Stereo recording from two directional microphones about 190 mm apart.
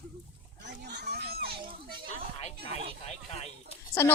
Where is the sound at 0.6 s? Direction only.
65° right (ahead or behind).